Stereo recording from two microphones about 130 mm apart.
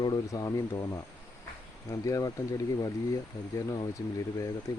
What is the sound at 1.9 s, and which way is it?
Speech, 25° left (ahead or behind).